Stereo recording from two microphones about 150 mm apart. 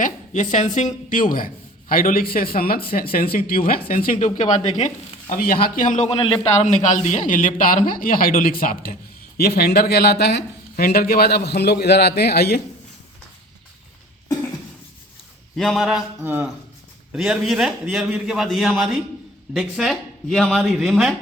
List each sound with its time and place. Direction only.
0.0 s a woman's voice: 55° left (ahead or behind); by 3.8 s 80° left
3.8 s a woman's voice: 70° left (ahead or behind)
5.9 s a man's voice: 45° left (ahead or behind)
6.7 s speech: 50° left (ahead or behind); by 9.0 s 75° left (ahead or behind)
9.4 s speech: 90° left
15.5 s a man's voice: centre (ahead or behind)
16.2 s a man's voice: 15° right (ahead or behind)